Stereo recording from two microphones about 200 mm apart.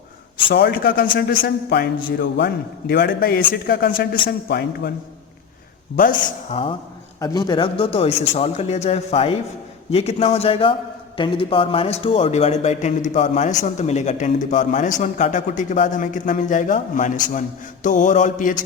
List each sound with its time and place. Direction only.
0.5 s a man's voice: 50° left (ahead or behind)
6.1 s a man's voice: 25° left (ahead or behind)